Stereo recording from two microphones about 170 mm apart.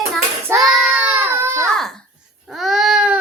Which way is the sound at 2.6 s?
Centre (ahead or behind).